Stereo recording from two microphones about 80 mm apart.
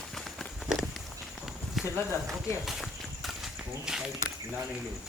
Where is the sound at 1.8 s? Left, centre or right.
Centre.